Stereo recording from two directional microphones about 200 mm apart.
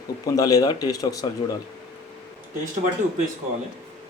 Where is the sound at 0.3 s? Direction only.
20° left (ahead or behind).